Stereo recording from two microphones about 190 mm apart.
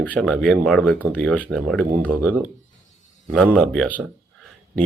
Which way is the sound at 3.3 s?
Centre (ahead or behind).